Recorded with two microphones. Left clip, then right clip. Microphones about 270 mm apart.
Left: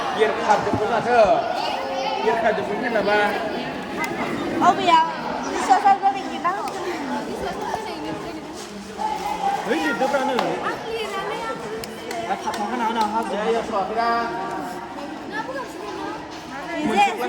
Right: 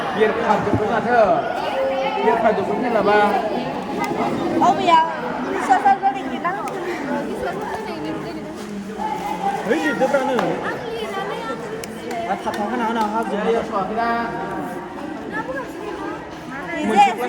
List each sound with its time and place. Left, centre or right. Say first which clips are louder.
0.0 s speech: right 2 dB; left
2.4 s speech: right 3 dB; centre
5.5 s chatter: right 1 dB; left
6.4 s a sound: even; left
9.7 s speech: right 6 dB; left
12.3 s speech: right 1 dB; left
16.7 s a sound: right 4 dB; left